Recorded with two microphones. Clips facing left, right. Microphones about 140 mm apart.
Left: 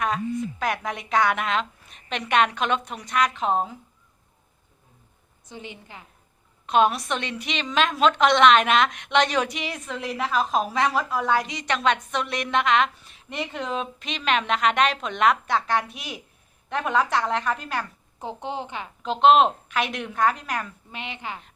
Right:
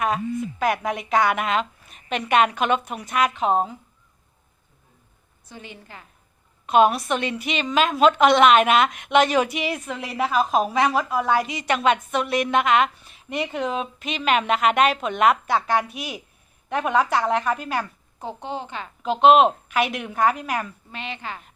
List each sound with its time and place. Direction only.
0.6 s a woman's voice: 5° right (ahead or behind)
5.5 s a woman's voice: 20° left (ahead or behind)
6.7 s a woman's voice: 5° right (ahead or behind)
18.2 s a woman's voice: 20° left (ahead or behind)
19.0 s a woman's voice: 5° right (ahead or behind)
20.9 s a woman's voice: 15° left (ahead or behind)